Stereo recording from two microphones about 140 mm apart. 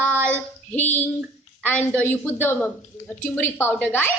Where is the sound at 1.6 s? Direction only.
10° left (ahead or behind).